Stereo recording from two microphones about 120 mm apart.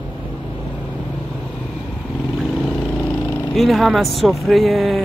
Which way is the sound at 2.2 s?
5° right (ahead or behind).